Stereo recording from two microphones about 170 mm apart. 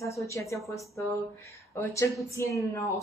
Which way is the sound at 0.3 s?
15° left (ahead or behind).